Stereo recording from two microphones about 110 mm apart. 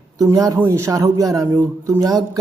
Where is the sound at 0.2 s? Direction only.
35° right (ahead or behind).